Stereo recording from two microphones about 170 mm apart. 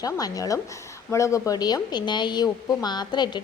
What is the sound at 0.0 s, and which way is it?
A woman's voice, 20° left (ahead or behind).